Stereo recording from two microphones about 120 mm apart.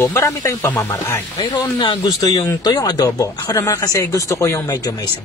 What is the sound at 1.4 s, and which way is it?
Speech, 40° left (ahead or behind).